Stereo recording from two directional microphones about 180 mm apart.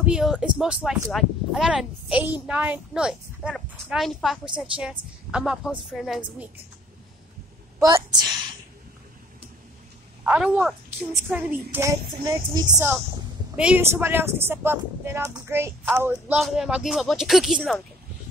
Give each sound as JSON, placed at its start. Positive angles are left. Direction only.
{"t": 0.0, "sound": "speech", "side_deg": -5}
{"t": 7.8, "sound": "a woman's voice", "side_deg": -20}
{"t": 10.2, "sound": "speech", "side_deg": -10}